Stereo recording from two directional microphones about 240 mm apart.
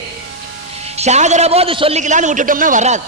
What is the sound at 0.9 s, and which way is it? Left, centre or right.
A man's voice, right.